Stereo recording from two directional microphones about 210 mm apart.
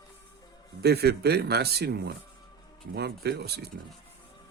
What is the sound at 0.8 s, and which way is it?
A man's voice, 50° right (ahead or behind).